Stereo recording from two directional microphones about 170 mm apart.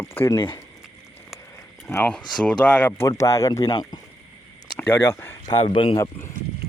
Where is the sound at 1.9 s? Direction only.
10° left (ahead or behind).